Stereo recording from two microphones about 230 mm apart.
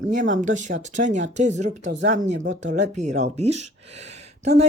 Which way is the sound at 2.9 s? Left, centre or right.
Right.